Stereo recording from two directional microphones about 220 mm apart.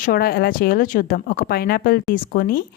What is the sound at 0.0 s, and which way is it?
Speech, 40° left (ahead or behind).